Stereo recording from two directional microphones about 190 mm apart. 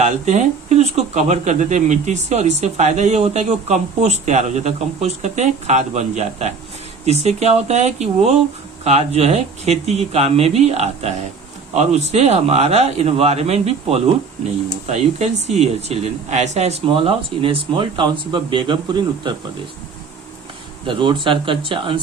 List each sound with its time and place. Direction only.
0.0 s speech: 35° right (ahead or behind)
15.4 s speech: 35° right (ahead or behind)
20.8 s speech: 25° right (ahead or behind)